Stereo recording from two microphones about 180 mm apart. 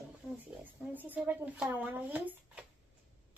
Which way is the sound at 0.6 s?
10° right (ahead or behind).